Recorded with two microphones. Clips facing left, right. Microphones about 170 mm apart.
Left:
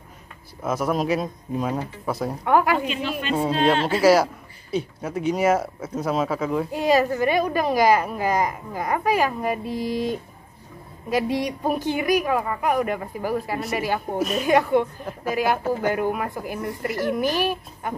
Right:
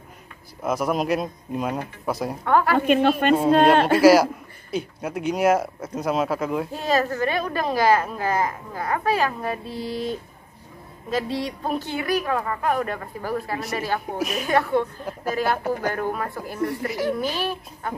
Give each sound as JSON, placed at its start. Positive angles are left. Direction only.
{"t": 0.6, "sound": "a man's voice", "side_deg": 0}
{"t": 2.4, "sound": "a woman's voice", "side_deg": 10}
{"t": 2.8, "sound": "a man's voice", "side_deg": -55}
{"t": 4.0, "sound": "a man's voice", "side_deg": 0}
{"t": 6.7, "sound": "a woman's voice", "side_deg": 15}
{"t": 14.1, "sound": "a man's voice", "side_deg": -5}
{"t": 14.4, "sound": "a woman's voice", "side_deg": 15}